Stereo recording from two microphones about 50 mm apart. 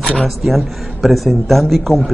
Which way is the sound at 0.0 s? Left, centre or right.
Centre.